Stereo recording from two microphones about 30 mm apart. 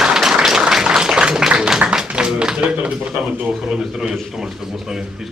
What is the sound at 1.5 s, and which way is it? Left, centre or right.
A man's voice, right.